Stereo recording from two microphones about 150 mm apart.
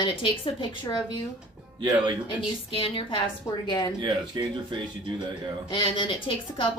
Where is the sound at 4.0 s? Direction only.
30° right (ahead or behind).